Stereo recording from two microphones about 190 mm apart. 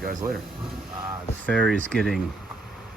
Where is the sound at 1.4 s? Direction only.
Centre (ahead or behind).